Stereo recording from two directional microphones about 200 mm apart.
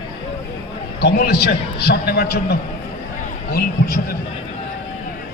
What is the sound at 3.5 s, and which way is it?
Speech, 50° left (ahead or behind).